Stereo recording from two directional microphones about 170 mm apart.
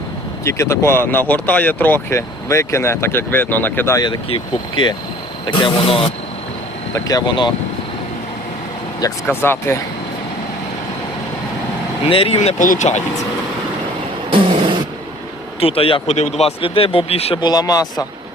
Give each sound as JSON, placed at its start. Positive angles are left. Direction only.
{"t": 0.4, "sound": "speech", "side_deg": 15}
{"t": 9.2, "sound": "speech", "side_deg": 10}
{"t": 12.0, "sound": "speech", "side_deg": 35}
{"t": 14.3, "sound": "a sound", "side_deg": -30}
{"t": 15.6, "sound": "speech", "side_deg": 35}
{"t": 17.4, "sound": "speech", "side_deg": 25}